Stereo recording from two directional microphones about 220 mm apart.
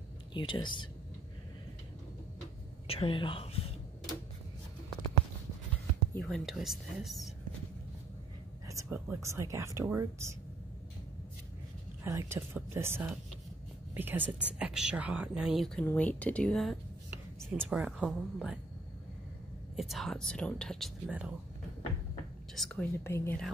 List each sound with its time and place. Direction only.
0.3 s speech: 20° left (ahead or behind)
2.9 s speech: 25° left (ahead or behind)
6.1 s speech: centre (ahead or behind)
8.6 s speech: 10° right (ahead or behind)
12.0 s speech: 10° right (ahead or behind)
19.7 s speech: centre (ahead or behind)
22.6 s speech: 5° left (ahead or behind)